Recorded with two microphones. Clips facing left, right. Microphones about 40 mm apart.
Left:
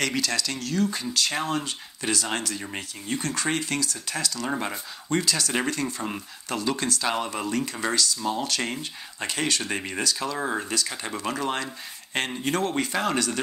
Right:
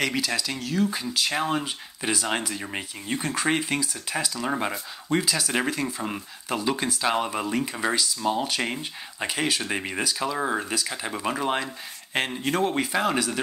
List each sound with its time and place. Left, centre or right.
0.0 s speech: centre